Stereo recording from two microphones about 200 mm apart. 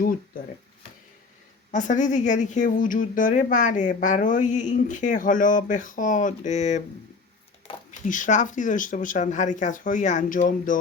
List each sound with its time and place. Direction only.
1.7 s a woman's voice: 40° left (ahead or behind)
7.9 s a woman's voice: 40° left (ahead or behind)